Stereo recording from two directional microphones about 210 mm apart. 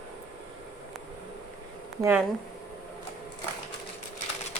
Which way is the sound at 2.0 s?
10° right (ahead or behind).